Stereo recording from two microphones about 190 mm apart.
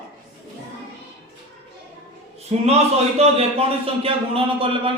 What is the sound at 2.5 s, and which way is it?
A man's voice, 35° right (ahead or behind).